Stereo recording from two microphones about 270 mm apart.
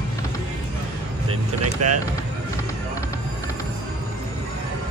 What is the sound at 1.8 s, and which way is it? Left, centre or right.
Speech, right.